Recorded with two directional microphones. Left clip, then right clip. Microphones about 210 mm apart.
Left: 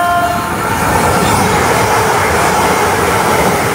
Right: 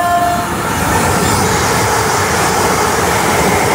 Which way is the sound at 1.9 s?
45° left (ahead or behind).